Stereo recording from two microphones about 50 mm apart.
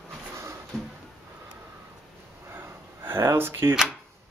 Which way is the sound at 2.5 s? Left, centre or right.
Right.